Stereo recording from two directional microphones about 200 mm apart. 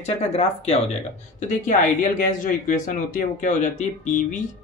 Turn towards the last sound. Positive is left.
turn(degrees=40)  # may be behind; listen again after turning